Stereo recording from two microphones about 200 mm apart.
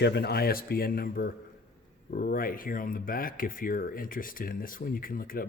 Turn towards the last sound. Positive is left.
turn(degrees=45)  # may be behind; listen again after turning